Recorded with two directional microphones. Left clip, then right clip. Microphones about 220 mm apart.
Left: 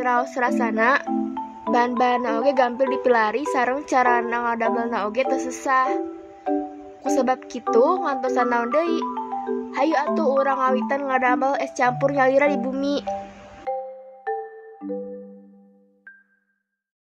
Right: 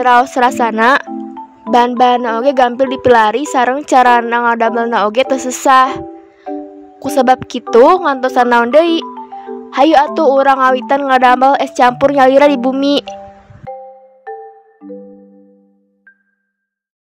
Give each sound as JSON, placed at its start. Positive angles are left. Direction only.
{"t": 0.0, "sound": "a woman's voice", "side_deg": -45}
{"t": 1.0, "sound": "music", "side_deg": 0}
{"t": 1.7, "sound": "a woman's voice", "side_deg": -40}
{"t": 6.5, "sound": "music", "side_deg": 0}
{"t": 7.0, "sound": "a woman's voice", "side_deg": -45}
{"t": 14.3, "sound": "music", "side_deg": 0}